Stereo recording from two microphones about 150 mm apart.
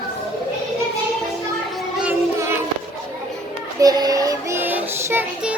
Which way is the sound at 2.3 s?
15° right (ahead or behind).